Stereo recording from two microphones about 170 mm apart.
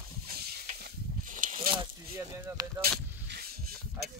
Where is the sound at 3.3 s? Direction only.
65° right (ahead or behind).